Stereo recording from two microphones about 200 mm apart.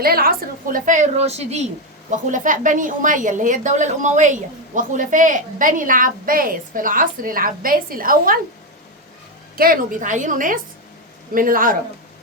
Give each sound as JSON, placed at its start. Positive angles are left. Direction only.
{"t": 0.0, "sound": "a woman's voice", "side_deg": -50}
{"t": 9.6, "sound": "a woman's voice", "side_deg": -45}